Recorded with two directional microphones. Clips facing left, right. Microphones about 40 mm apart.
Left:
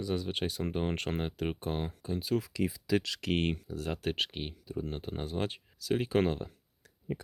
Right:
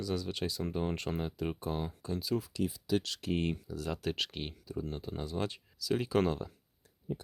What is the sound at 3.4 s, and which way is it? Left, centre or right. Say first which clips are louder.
Speech: left 2 dB; left.